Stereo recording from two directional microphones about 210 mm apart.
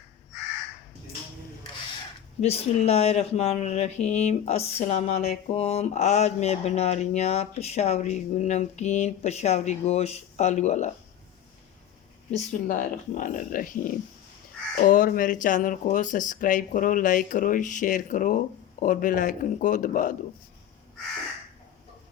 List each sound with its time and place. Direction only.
2.4 s speech: 30° left (ahead or behind)
12.3 s speech: 40° left (ahead or behind)